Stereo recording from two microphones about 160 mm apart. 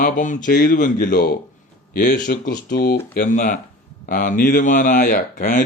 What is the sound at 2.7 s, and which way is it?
Speech, 70° left (ahead or behind).